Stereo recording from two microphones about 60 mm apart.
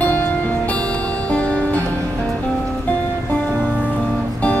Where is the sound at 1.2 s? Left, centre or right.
Centre.